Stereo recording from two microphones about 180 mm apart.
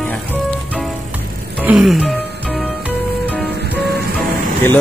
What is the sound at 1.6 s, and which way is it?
Speech, centre (ahead or behind).